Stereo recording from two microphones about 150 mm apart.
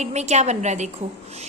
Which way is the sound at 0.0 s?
50° right (ahead or behind).